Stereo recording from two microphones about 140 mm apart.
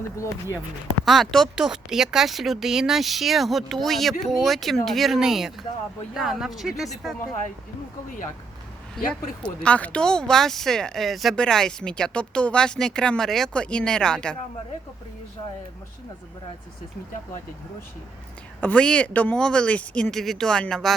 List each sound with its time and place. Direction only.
0.2 s speech: 20° left (ahead or behind)
1.0 s speech: centre (ahead or behind)
9.4 s speech: 10° left (ahead or behind)
18.6 s speech: 5° left (ahead or behind)